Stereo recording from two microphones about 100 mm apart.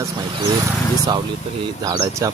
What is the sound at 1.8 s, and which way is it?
Speech, 35° right (ahead or behind).